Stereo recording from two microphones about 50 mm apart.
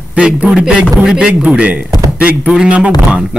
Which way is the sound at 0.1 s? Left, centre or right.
Right.